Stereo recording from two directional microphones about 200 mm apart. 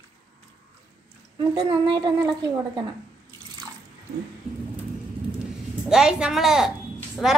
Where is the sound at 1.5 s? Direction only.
20° right (ahead or behind).